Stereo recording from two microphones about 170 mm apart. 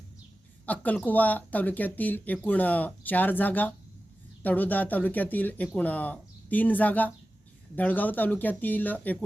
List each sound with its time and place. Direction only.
0.6 s speech: 10° left (ahead or behind)